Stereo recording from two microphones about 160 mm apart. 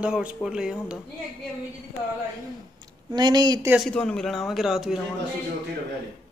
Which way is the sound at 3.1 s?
25° right (ahead or behind).